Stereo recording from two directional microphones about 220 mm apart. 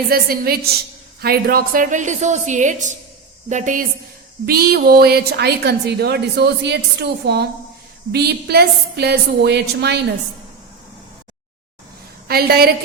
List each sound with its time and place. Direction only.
0.1 s a woman's voice: 45° right (ahead or behind)
12.3 s a woman's voice: 45° right (ahead or behind)